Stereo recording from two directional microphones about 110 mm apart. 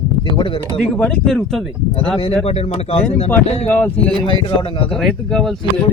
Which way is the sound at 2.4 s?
70° left (ahead or behind).